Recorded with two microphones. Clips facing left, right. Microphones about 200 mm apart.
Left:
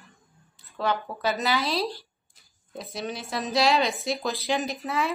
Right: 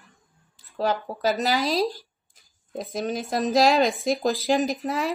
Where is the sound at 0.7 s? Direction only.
40° right (ahead or behind).